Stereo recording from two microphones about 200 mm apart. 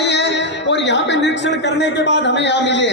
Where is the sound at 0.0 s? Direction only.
60° left (ahead or behind).